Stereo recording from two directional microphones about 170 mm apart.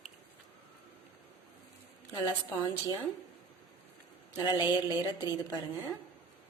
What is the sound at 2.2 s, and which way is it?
Speech, 25° left (ahead or behind).